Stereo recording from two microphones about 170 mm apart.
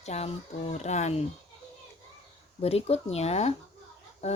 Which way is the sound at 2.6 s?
35° left (ahead or behind).